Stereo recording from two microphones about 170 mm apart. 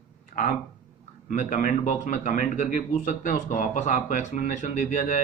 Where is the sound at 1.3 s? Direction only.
45° left (ahead or behind).